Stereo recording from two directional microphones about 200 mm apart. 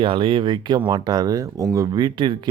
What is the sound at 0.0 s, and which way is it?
Speech, 25° right (ahead or behind).